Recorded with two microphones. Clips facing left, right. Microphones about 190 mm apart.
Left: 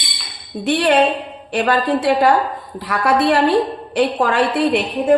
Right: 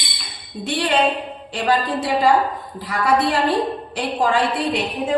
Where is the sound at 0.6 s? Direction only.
60° left (ahead or behind).